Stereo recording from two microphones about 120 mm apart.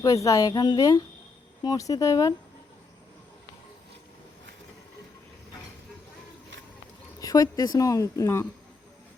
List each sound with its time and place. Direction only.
0.0 s a woman's voice: 25° left (ahead or behind)
7.2 s a woman's voice: 30° left (ahead or behind)